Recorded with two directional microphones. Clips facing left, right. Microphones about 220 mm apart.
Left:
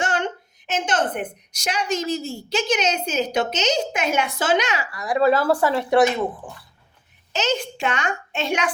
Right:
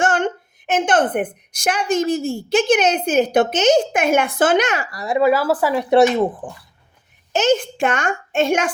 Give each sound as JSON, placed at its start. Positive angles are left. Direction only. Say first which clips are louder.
{"t": 0.0, "sound": "a woman's voice", "louder": "right 5 dB", "side_deg": -50}
{"t": 5.1, "sound": "speech", "louder": "right 2 dB", "side_deg": -10}
{"t": 6.4, "sound": "a woman's voice", "louder": "right 6 dB", "side_deg": -50}